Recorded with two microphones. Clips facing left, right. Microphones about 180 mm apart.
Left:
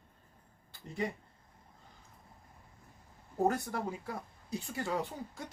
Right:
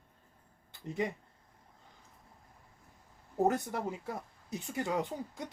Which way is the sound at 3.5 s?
20° right (ahead or behind).